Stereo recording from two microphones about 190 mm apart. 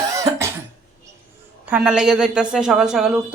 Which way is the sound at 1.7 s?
5° right (ahead or behind).